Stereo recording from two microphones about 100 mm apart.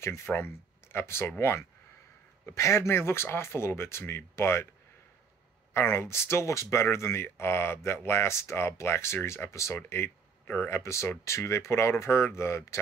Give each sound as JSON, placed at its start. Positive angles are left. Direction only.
{"t": 0.0, "sound": "speech", "side_deg": 25}
{"t": 2.4, "sound": "speech", "side_deg": 30}
{"t": 5.7, "sound": "speech", "side_deg": 25}
{"t": 10.8, "sound": "speech", "side_deg": 30}